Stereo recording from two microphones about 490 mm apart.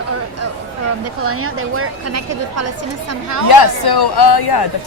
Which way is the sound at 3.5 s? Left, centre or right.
Left.